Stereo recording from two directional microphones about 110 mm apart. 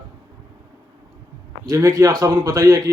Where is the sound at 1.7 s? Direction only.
30° right (ahead or behind).